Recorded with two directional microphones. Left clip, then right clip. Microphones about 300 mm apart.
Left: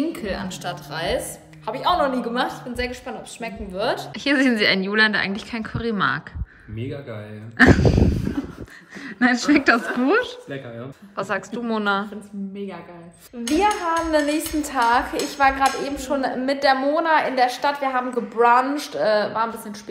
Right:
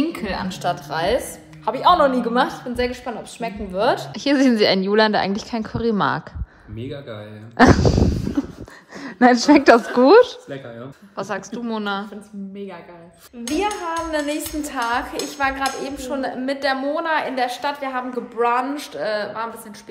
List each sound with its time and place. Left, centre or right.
0.1 s a woman's voice: centre
4.1 s a woman's voice: centre
9.0 s a woman's voice: centre
13.5 s a woman's voice: centre